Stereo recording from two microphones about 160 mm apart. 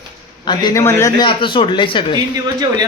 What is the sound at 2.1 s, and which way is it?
Speech, 25° right (ahead or behind).